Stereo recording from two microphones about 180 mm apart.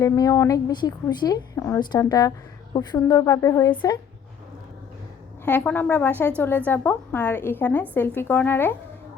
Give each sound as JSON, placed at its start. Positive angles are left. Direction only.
{"t": 0.0, "sound": "a woman's voice", "side_deg": 20}
{"t": 5.5, "sound": "a woman's voice", "side_deg": 10}